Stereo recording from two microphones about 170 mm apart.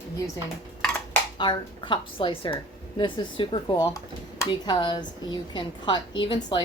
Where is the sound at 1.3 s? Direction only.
25° left (ahead or behind).